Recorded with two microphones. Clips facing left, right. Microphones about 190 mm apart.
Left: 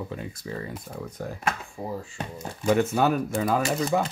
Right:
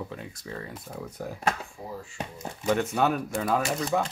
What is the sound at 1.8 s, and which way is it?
Speech, 60° left (ahead or behind).